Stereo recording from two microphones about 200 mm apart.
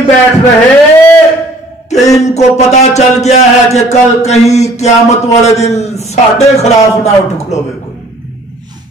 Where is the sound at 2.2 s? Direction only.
35° left (ahead or behind).